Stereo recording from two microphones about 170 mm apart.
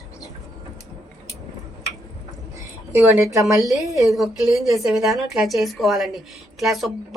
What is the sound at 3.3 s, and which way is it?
Speech, 20° right (ahead or behind).